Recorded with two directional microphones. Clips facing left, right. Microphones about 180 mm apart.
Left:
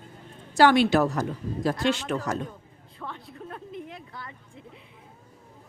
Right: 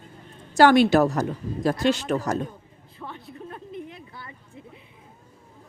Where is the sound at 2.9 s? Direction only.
5° right (ahead or behind).